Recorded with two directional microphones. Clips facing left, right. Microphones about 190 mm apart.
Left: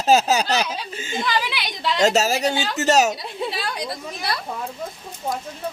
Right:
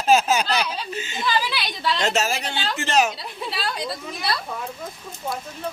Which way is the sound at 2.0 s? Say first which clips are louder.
Left 7 dB; 40° left (ahead or behind).